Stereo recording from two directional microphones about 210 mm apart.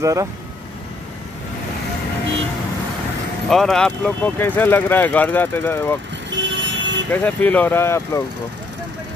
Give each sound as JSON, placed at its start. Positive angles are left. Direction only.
{"t": 0.0, "sound": "speech", "side_deg": -15}
{"t": 3.4, "sound": "speech", "side_deg": 0}
{"t": 6.3, "sound": "vehicle", "side_deg": -60}
{"t": 7.1, "sound": "speech", "side_deg": 5}